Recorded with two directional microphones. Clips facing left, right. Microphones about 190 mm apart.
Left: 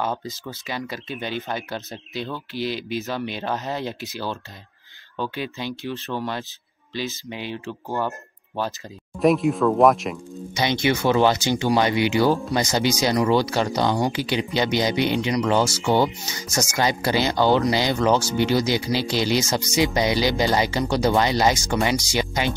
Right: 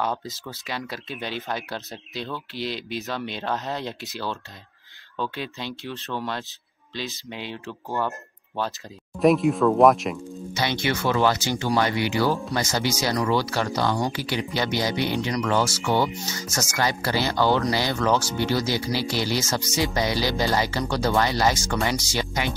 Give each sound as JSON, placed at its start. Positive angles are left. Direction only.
{"t": 0.0, "sound": "speech", "side_deg": 0}
{"t": 9.2, "sound": "speech", "side_deg": 0}
{"t": 10.5, "sound": "speech", "side_deg": 15}